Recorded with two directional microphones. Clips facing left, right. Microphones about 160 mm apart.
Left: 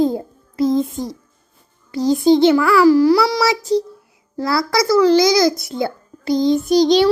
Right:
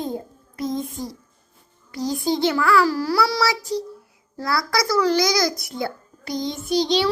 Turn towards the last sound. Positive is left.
turn(degrees=45)  # may be behind; listen again after turning